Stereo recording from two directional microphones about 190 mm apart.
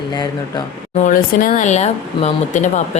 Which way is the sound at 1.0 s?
45° left (ahead or behind).